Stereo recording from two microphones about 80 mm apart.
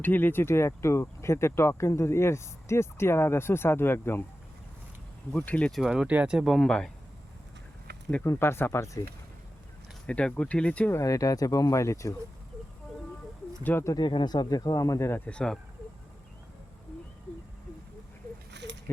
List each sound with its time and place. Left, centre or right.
0.0 s speech: left
5.4 s speech: centre
5.7 s speech: centre
6.4 s speech: centre
8.2 s speech: left
10.1 s speech: centre
10.9 s speech: left
13.6 s speech: left
13.9 s speech: left
15.3 s speech: centre